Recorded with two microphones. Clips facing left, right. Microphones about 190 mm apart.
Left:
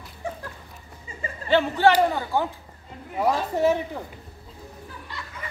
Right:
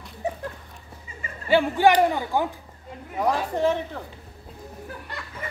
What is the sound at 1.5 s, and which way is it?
Speech, 10° right (ahead or behind).